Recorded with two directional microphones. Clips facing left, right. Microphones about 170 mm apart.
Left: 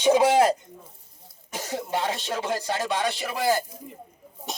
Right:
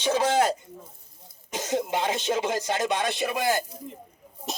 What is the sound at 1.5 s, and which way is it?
Speech, 20° right (ahead or behind).